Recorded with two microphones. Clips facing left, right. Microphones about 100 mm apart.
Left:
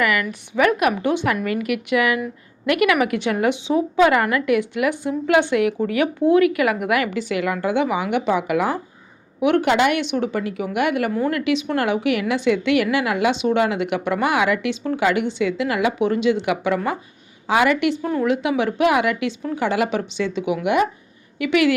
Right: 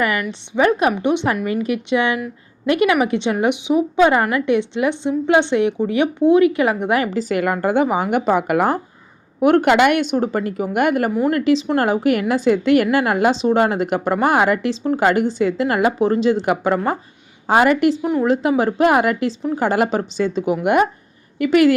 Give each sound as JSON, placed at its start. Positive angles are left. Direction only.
{"t": 0.0, "sound": "a woman's voice", "side_deg": -30}